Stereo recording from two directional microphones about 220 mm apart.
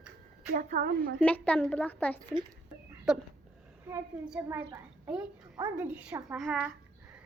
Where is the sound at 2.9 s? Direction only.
5° right (ahead or behind).